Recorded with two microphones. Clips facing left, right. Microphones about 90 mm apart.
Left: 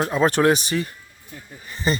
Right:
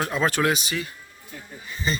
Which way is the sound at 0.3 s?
40° left (ahead or behind).